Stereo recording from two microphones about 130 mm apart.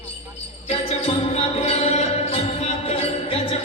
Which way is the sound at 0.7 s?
50° left (ahead or behind).